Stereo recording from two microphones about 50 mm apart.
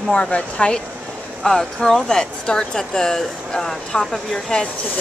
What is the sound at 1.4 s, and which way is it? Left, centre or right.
Speech, centre.